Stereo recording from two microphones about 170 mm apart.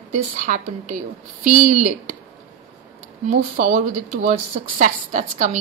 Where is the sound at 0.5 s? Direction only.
45° right (ahead or behind).